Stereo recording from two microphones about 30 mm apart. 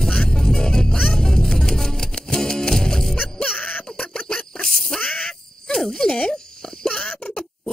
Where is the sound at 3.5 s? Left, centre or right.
Left.